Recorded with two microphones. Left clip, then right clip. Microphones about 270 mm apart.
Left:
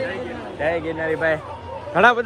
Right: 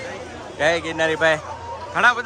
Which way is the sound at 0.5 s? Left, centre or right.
Centre.